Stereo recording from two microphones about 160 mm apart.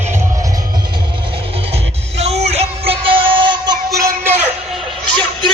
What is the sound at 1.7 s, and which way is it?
Music, 40° right (ahead or behind).